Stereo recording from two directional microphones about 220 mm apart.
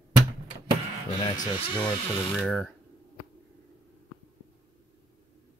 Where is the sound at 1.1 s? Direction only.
25° left (ahead or behind).